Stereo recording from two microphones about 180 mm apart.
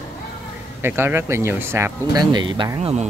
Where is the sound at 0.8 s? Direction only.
15° right (ahead or behind).